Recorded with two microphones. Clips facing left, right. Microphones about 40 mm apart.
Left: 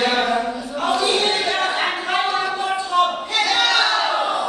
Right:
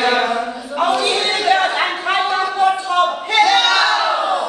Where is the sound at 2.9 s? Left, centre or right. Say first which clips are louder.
Right 3 dB; right.